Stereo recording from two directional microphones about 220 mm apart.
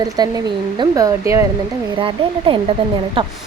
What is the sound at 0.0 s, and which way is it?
Speech, 20° right (ahead or behind).